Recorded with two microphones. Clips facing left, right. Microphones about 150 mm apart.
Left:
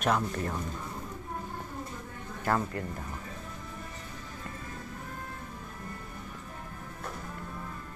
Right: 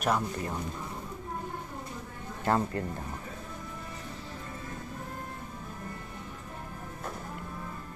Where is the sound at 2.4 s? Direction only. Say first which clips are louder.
Right 2 dB; 25° right (ahead or behind).